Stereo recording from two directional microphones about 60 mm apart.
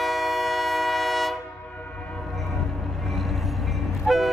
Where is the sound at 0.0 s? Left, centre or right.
Centre.